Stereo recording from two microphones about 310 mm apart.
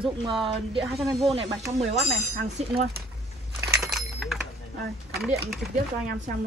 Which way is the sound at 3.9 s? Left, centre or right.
Centre.